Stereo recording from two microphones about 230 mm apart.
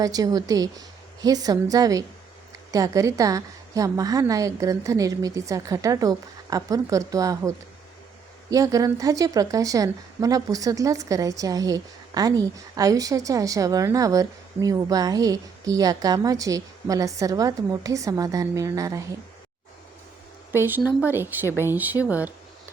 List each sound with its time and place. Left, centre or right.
0.0 s a woman's voice: centre
20.5 s a woman's voice: centre